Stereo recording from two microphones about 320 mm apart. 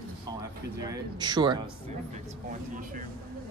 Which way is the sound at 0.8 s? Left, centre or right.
Centre.